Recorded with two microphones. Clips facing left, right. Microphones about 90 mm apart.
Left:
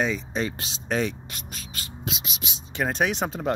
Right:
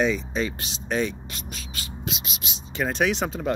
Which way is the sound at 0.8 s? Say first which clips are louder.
Even; 90° left.